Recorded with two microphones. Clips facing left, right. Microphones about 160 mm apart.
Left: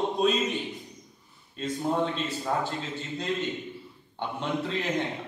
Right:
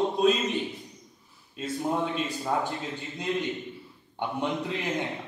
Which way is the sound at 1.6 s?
10° right (ahead or behind).